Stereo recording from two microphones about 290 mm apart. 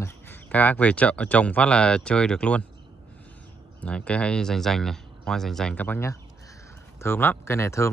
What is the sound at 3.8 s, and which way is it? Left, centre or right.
Speech, centre.